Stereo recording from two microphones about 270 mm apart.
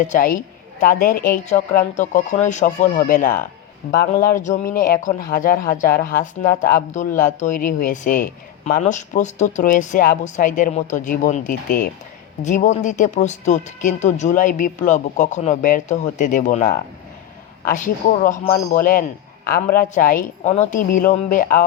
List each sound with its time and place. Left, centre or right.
0.1 s speech: left